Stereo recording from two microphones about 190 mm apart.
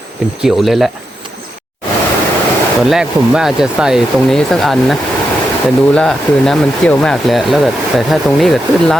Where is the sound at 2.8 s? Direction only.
Centre (ahead or behind).